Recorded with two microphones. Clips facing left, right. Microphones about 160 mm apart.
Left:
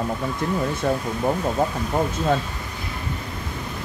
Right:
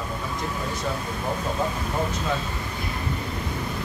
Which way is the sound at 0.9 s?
55° left (ahead or behind).